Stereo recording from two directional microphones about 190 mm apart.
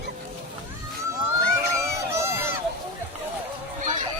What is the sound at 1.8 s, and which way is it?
Crowd, 15° right (ahead or behind).